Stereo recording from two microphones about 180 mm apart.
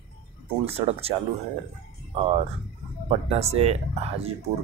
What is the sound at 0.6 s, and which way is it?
Speech, 35° right (ahead or behind).